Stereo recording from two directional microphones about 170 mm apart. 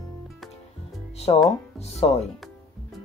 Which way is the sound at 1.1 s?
35° left (ahead or behind).